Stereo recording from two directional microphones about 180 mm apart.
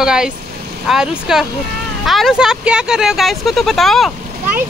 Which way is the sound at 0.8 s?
5° right (ahead or behind).